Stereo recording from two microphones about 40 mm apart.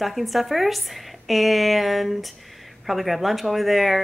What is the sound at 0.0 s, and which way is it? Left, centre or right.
Speech, centre.